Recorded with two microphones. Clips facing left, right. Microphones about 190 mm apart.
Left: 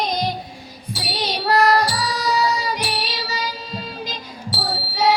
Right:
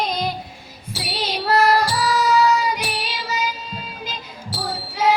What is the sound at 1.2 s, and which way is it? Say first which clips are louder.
Child singing: even; 35° left (ahead or behind).